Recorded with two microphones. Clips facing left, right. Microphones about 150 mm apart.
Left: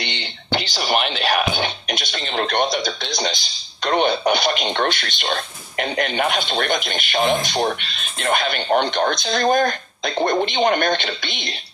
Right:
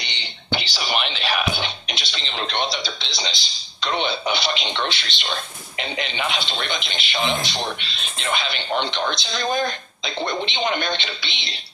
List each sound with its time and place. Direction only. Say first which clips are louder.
0.0 s speech: left 7 dB; 55° left (ahead or behind)